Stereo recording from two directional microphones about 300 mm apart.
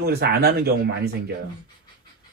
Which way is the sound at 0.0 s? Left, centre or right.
Right.